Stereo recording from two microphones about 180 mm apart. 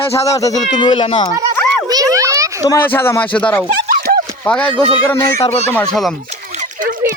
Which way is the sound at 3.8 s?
55° right (ahead or behind).